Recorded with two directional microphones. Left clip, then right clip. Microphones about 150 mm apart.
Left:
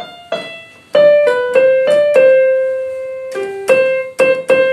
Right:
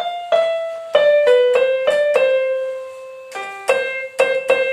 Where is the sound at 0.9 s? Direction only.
20° left (ahead or behind).